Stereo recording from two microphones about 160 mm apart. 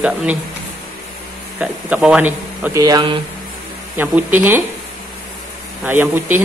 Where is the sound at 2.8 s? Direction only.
30° right (ahead or behind).